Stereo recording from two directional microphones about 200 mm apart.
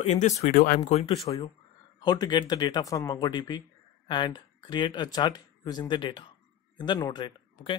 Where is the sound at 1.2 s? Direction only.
20° left (ahead or behind).